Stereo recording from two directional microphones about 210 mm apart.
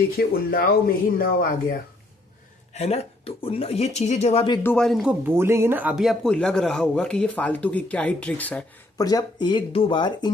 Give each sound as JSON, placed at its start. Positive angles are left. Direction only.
{"t": 0.2, "sound": "speech", "side_deg": 45}
{"t": 2.7, "sound": "speech", "side_deg": 30}
{"t": 4.6, "sound": "speech", "side_deg": 5}
{"t": 5.2, "sound": "speech", "side_deg": -10}
{"t": 9.0, "sound": "speech", "side_deg": 20}